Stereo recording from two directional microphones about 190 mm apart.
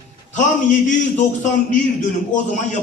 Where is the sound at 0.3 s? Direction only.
40° left (ahead or behind).